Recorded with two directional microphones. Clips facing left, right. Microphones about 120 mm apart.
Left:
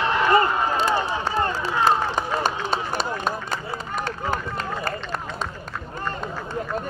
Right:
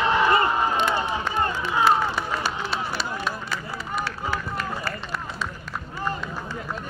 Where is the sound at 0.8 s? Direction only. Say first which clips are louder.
Left 1 dB; 40° left (ahead or behind).